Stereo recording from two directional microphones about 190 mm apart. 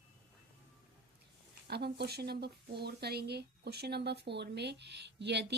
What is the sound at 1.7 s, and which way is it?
A woman's voice, 60° right (ahead or behind).